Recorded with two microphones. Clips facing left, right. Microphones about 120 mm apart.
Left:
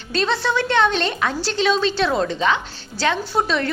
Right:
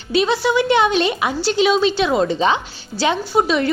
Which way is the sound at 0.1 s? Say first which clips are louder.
Right 4 dB; 5° right (ahead or behind).